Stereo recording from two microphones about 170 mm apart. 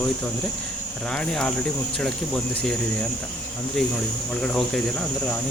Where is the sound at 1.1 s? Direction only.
5° left (ahead or behind).